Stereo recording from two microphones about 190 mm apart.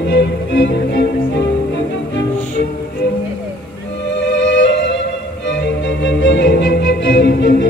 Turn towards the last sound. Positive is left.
turn(degrees=65)  # may be behind; listen again after turning